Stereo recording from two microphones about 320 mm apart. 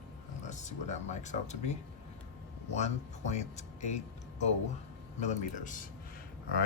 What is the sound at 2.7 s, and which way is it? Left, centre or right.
Speech, left.